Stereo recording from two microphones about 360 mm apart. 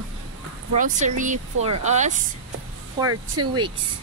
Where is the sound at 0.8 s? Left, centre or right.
Right.